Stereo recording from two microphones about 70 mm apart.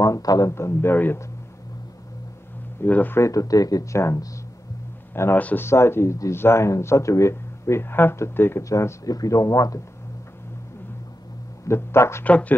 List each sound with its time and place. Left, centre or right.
0.0 s speech: left
0.5 s speech: left
2.8 s speech: left
3.2 s speech: left
5.1 s a man's voice: left
5.4 s speech: left
5.7 s speech: left
8.6 s speech: left
11.6 s speech: left
12.3 s speech: centre